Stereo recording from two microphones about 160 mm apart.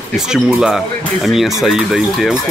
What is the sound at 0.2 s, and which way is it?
Speech, 5° right (ahead or behind).